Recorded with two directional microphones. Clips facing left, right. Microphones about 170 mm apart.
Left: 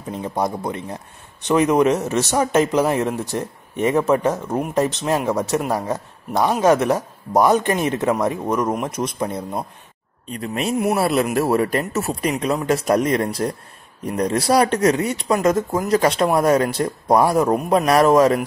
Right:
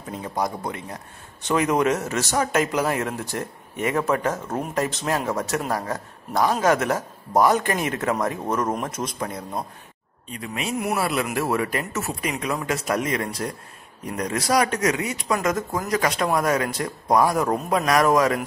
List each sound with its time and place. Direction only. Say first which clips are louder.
0.1 s speech: left 4 dB; 25° left (ahead or behind)
10.3 s speech: left 6 dB; 40° left (ahead or behind)